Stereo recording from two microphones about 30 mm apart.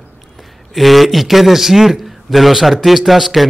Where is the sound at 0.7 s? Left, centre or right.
Centre.